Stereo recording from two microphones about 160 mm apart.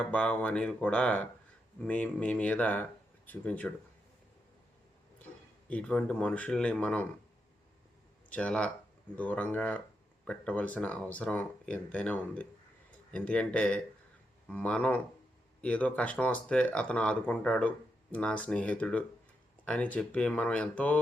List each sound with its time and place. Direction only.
0.0 s speech: 5° left (ahead or behind)
5.6 s speech: 10° left (ahead or behind)
8.3 s speech: 5° left (ahead or behind)